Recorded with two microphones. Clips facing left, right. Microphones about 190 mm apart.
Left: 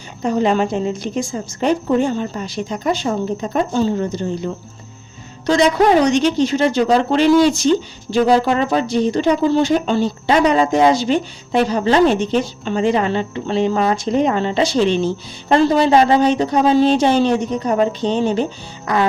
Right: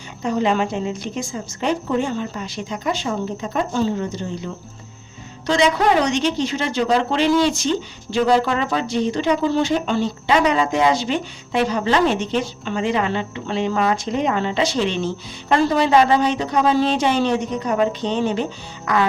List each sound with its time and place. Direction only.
0.2 s a woman's voice: 40° left (ahead or behind)
5.5 s a woman's voice: 40° left (ahead or behind)